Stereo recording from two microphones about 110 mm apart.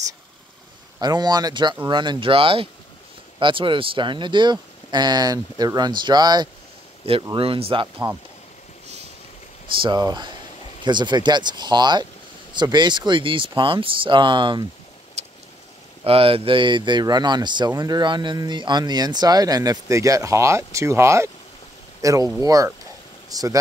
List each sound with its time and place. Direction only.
1.0 s speech: 40° right (ahead or behind)
7.3 s speech: 55° right (ahead or behind)
9.8 s speech: 40° right (ahead or behind)
15.2 s vehicle: 80° right
16.0 s speech: 55° right (ahead or behind); by 23.6 s 35° right (ahead or behind)